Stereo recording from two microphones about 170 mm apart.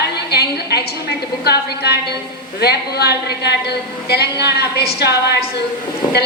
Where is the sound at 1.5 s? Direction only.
75° left (ahead or behind).